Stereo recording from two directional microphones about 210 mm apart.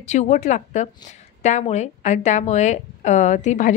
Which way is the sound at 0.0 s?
35° left (ahead or behind).